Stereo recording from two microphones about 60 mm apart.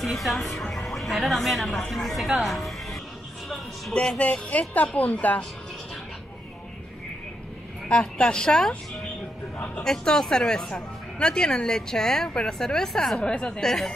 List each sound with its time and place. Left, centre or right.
0.0 s a woman's voice: centre
3.9 s speech: centre
7.9 s speech: centre
9.8 s speech: centre